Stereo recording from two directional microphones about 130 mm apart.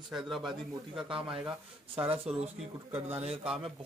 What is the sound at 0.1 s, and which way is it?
Speech, centre (ahead or behind).